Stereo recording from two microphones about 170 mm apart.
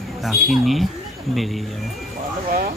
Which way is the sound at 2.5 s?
55° right (ahead or behind).